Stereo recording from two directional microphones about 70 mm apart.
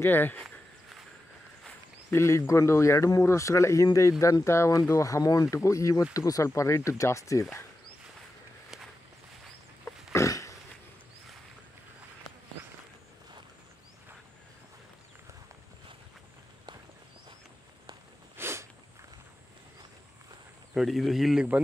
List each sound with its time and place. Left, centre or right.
0.0 s speech: left
0.4 s walk: centre
2.0 s speech: left
10.1 s a sound: left
18.3 s a sound: right
20.7 s speech: centre